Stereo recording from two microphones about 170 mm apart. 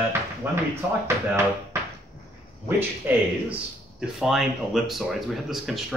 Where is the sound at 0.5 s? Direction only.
10° right (ahead or behind).